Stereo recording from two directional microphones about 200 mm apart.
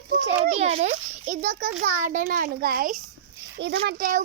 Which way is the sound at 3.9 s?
45° right (ahead or behind).